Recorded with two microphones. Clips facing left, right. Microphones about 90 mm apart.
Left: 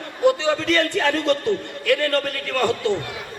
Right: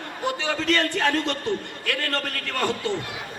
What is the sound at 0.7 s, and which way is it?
Speech, 20° right (ahead or behind).